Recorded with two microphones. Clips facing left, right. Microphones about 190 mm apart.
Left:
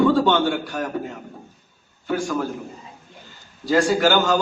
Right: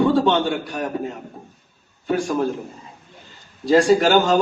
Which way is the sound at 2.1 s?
25° right (ahead or behind).